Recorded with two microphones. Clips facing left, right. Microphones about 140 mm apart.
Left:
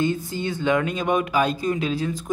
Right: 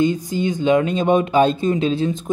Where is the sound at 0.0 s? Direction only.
15° right (ahead or behind).